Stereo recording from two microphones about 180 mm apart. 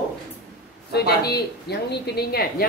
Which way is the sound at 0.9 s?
60° left (ahead or behind).